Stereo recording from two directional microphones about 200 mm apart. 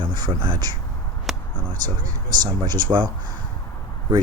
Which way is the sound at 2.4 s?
20° right (ahead or behind).